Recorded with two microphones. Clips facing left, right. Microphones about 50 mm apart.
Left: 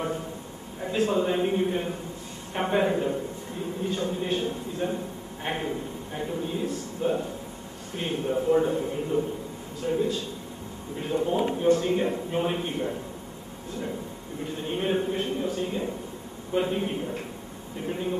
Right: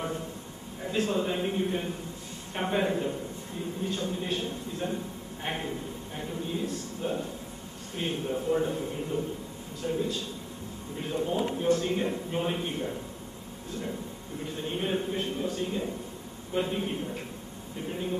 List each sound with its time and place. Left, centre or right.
0.9 s a man's voice: centre
14.8 s a man's voice: centre